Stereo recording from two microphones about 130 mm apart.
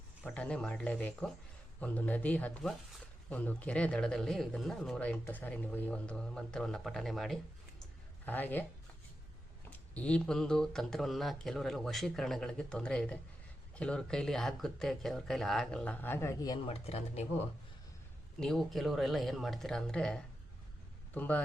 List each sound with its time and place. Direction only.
0.3 s speech: 10° left (ahead or behind)
8.2 s speech: 15° left (ahead or behind)
9.6 s speech: 10° left (ahead or behind)
16.6 s speech: 50° left (ahead or behind)
18.3 s speech: 5° left (ahead or behind)